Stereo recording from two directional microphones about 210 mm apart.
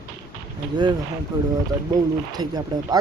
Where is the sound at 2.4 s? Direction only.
20° right (ahead or behind).